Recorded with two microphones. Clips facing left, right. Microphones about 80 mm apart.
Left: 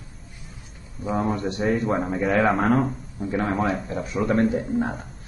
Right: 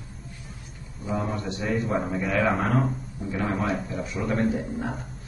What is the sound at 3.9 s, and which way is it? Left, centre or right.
Speech, left.